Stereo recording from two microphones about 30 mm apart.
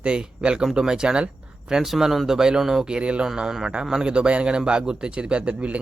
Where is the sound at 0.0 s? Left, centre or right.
Right.